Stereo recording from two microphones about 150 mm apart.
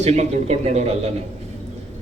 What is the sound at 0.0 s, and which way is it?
A man's voice, 45° right (ahead or behind).